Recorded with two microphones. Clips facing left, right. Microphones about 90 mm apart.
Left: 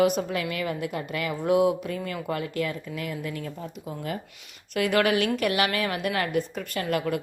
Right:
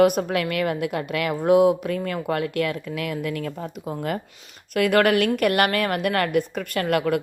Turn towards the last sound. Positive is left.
turn(degrees=-60)  # may be behind; listen again after turning